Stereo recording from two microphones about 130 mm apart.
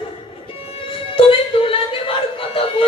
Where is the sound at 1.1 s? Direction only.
45° left (ahead or behind).